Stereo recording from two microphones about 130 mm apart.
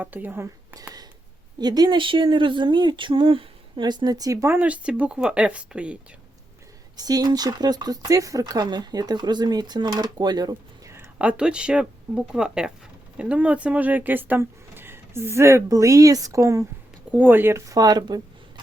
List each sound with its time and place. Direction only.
0.0 s speech: 15° right (ahead or behind)
4.5 s speech: 10° right (ahead or behind)
6.9 s speech: 30° right (ahead or behind)
10.9 s speech: 15° right (ahead or behind)
17.1 s speech: 15° right (ahead or behind); by 18.6 s 30° right (ahead or behind)